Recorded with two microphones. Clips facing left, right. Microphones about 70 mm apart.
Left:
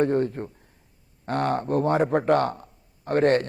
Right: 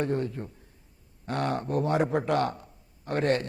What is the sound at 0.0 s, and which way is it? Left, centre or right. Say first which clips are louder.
Speech: left 6 dB; left.